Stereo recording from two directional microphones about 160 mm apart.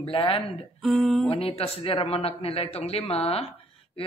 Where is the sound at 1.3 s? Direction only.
40° left (ahead or behind).